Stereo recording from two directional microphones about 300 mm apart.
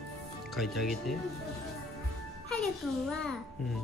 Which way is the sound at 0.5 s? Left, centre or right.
Centre.